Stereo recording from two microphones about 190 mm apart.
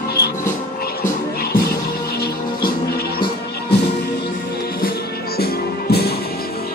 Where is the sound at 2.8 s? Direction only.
55° left (ahead or behind).